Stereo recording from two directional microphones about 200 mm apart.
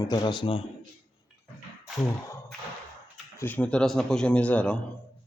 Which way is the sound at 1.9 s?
15° left (ahead or behind).